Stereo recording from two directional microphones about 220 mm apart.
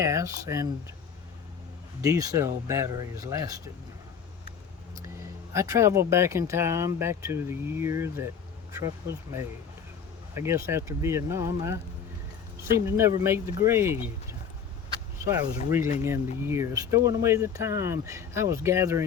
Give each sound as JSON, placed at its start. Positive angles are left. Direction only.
{"t": 0.0, "sound": "speech", "side_deg": -15}
{"t": 2.0, "sound": "speech", "side_deg": -15}
{"t": 5.5, "sound": "speech", "side_deg": -15}
{"t": 15.2, "sound": "speech", "side_deg": -10}